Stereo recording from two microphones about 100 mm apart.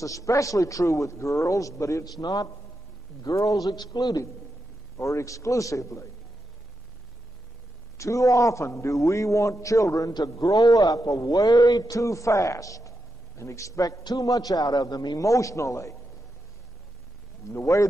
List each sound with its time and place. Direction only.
0.0 s a man's voice: 35° left (ahead or behind)
8.0 s a man's voice: 30° left (ahead or behind)
17.5 s speech: 30° left (ahead or behind)